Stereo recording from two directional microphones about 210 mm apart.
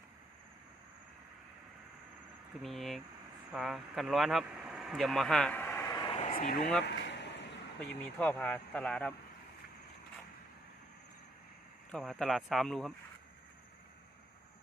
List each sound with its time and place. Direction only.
2.6 s speech: centre (ahead or behind); by 6.7 s 40° left (ahead or behind)
6.8 s vehicle: 55° left (ahead or behind)
8.2 s speech: 10° left (ahead or behind)
11.9 s speech: 5° left (ahead or behind)